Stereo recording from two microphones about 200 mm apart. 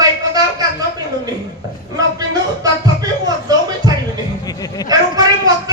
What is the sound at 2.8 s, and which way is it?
Music, 20° right (ahead or behind).